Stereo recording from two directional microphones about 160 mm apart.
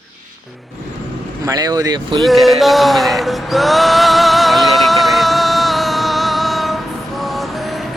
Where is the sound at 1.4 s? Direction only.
25° right (ahead or behind).